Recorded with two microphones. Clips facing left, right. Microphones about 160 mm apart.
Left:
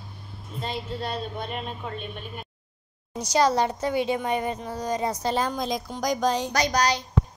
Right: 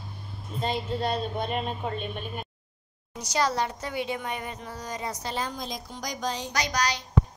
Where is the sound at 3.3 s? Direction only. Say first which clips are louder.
Left 5 dB; 30° left (ahead or behind).